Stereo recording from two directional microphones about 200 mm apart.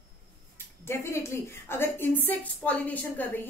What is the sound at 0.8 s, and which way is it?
A woman's voice, 15° left (ahead or behind).